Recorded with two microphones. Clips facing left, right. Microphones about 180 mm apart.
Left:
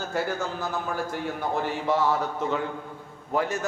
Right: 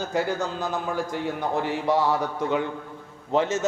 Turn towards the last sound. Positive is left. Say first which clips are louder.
# right 3 dB
turn(degrees=-20)  # may be behind; listen again after turning